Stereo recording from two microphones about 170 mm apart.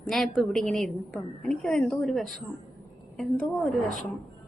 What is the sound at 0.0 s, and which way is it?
A woman's voice, centre (ahead or behind).